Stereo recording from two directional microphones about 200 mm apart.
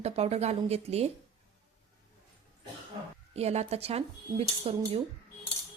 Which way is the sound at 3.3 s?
30° right (ahead or behind).